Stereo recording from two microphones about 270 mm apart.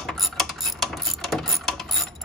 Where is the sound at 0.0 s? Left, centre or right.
Centre.